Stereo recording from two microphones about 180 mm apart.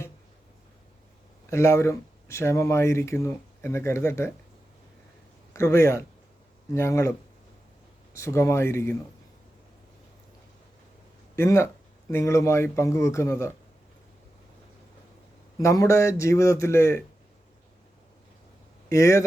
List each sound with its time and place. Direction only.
1.5 s speech: 15° left (ahead or behind)
5.5 s speech: 15° left (ahead or behind)
8.1 s speech: 15° left (ahead or behind)
11.3 s speech: 15° left (ahead or behind)
15.5 s speech: 15° left (ahead or behind)
18.9 s speech: 15° left (ahead or behind)